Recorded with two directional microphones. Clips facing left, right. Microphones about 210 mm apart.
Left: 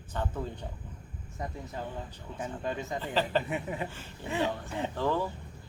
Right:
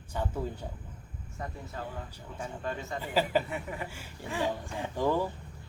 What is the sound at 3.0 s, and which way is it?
Speech, 10° right (ahead or behind).